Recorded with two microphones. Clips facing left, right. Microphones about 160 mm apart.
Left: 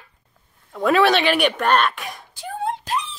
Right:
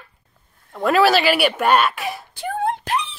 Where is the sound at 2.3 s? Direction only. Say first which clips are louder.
Right 2 dB; 60° right (ahead or behind).